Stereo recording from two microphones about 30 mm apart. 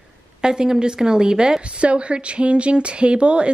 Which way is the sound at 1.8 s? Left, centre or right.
Right.